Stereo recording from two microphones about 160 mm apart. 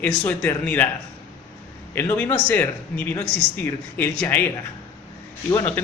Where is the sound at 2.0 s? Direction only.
15° left (ahead or behind).